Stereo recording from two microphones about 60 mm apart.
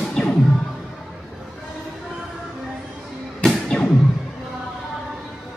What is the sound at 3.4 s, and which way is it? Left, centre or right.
Music, centre.